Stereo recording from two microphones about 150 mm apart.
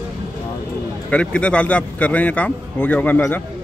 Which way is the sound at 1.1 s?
10° left (ahead or behind).